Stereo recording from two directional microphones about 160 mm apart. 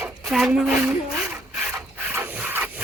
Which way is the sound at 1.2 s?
5° right (ahead or behind).